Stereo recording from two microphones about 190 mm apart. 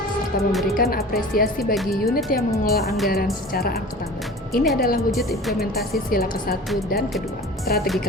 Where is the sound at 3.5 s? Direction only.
55° left (ahead or behind).